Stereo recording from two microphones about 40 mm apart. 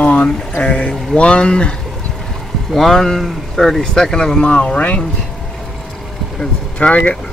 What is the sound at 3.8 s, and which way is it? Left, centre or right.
Speech, centre.